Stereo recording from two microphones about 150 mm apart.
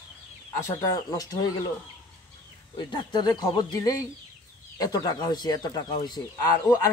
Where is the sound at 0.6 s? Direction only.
25° left (ahead or behind).